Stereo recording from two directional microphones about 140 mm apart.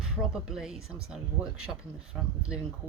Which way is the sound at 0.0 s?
5° right (ahead or behind).